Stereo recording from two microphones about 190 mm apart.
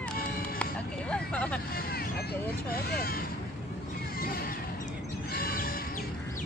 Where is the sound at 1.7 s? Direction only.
55° left (ahead or behind).